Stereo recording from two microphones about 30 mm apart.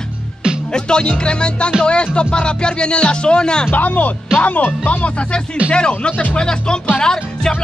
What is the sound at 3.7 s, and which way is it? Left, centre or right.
Speech, left.